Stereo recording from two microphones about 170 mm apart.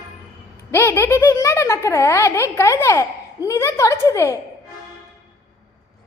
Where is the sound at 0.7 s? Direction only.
15° left (ahead or behind).